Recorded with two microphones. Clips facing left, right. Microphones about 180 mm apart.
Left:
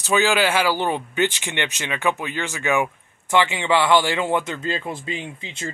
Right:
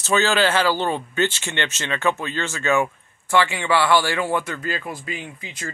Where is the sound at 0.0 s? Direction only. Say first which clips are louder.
Even; 15° left (ahead or behind).